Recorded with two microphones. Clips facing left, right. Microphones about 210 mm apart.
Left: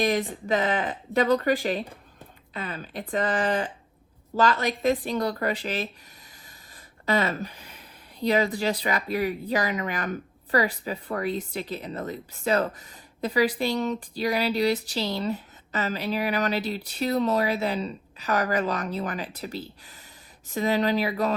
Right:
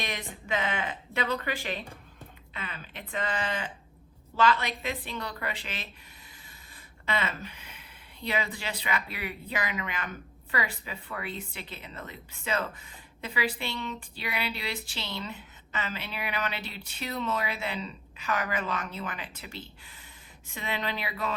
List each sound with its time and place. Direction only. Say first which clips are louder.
0.0 s speech: left 12 dB; 40° left (ahead or behind)
7.0 s a sound: left 7 dB; 40° left (ahead or behind)
8.5 s speech: left 7 dB; 40° left (ahead or behind)